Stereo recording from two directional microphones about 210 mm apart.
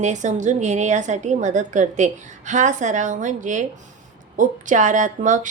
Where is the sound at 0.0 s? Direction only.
35° right (ahead or behind).